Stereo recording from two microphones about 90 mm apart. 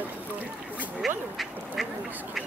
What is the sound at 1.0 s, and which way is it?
Speech, centre (ahead or behind).